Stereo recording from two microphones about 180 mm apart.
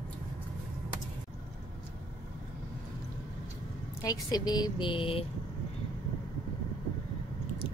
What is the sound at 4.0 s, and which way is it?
A woman's voice, 20° left (ahead or behind).